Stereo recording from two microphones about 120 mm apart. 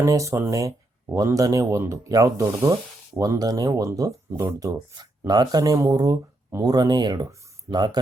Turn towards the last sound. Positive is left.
turn(degrees=-20)  # may be behind; listen again after turning